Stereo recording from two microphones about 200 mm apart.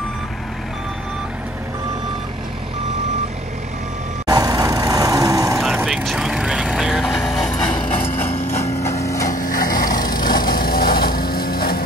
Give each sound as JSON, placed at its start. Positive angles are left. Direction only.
{"t": 4.3, "sound": "vehicle", "side_deg": -20}
{"t": 5.6, "sound": "vehicle", "side_deg": 0}
{"t": 7.7, "sound": "clip-clop", "side_deg": 25}
{"t": 8.8, "sound": "hammer", "side_deg": 15}
{"t": 9.3, "sound": "a sound", "side_deg": 45}
{"t": 10.0, "sound": "a sound", "side_deg": 20}
{"t": 10.5, "sound": "vehicle", "side_deg": 45}